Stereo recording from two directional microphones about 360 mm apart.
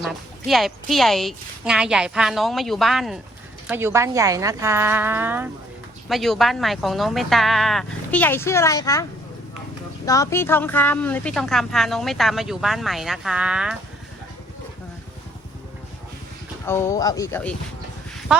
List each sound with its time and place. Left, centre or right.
0.0 s a woman's voice: centre
10.1 s a woman's voice: centre
16.6 s speech: centre